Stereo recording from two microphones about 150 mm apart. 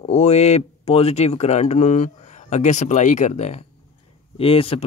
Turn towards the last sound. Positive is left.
turn(degrees=40)  # may be behind; listen again after turning